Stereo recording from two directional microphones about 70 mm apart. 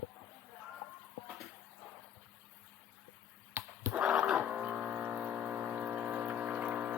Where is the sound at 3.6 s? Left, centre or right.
Right.